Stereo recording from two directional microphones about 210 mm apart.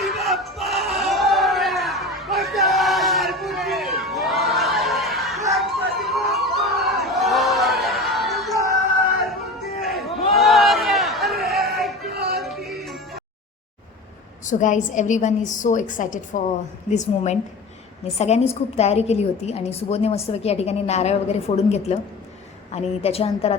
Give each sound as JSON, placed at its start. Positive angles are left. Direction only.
{"t": 0.0, "sound": "a sound", "side_deg": 0}
{"t": 9.8, "sound": "a sound", "side_deg": 0}
{"t": 11.7, "sound": "music", "side_deg": 0}
{"t": 12.0, "sound": "music", "side_deg": -50}
{"t": 12.4, "sound": "music", "side_deg": 0}
{"t": 14.4, "sound": "a woman's voice", "side_deg": 35}